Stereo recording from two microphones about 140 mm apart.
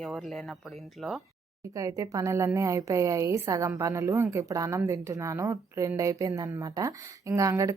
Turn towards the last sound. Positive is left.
turn(degrees=-25)  # may be behind; listen again after turning